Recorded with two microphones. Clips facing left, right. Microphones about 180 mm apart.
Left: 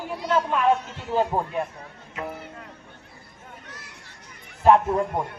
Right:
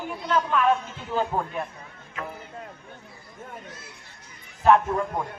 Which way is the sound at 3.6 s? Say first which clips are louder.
Right 2 dB; 75° left (ahead or behind).